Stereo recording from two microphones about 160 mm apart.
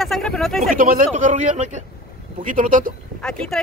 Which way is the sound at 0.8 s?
60° right (ahead or behind).